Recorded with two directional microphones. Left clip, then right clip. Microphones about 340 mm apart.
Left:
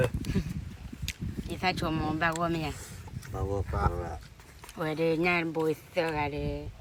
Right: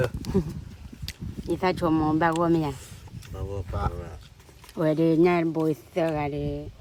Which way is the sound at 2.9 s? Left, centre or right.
Centre.